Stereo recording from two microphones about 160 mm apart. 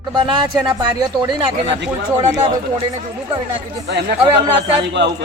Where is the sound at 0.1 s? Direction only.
25° right (ahead or behind).